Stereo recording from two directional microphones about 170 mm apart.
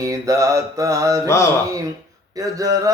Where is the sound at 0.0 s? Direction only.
20° right (ahead or behind).